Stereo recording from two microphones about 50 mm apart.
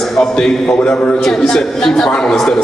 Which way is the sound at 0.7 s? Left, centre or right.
Centre.